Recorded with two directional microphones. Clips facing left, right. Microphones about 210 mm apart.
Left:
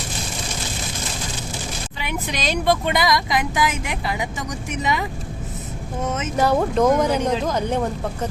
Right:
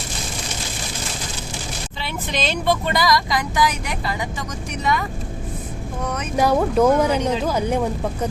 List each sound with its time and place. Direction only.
2.0 s speech: 15° left (ahead or behind)
6.3 s speech: 10° right (ahead or behind)